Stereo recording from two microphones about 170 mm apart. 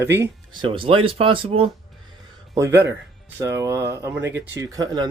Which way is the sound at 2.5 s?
15° right (ahead or behind).